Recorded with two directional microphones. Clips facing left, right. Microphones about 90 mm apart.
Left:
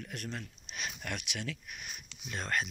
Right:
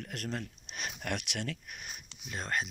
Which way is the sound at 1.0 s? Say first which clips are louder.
Right 7 dB; 60° right (ahead or behind).